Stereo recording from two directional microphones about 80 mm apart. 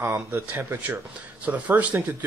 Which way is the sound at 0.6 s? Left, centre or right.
Right.